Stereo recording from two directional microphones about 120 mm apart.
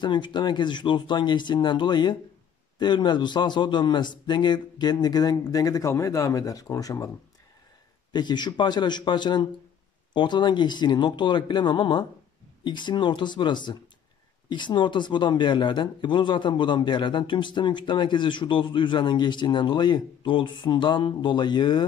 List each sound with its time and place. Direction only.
0.0 s speech: 40° left (ahead or behind)
8.1 s speech: 40° left (ahead or behind)